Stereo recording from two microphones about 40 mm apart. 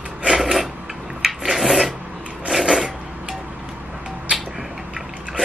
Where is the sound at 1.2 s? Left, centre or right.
Centre.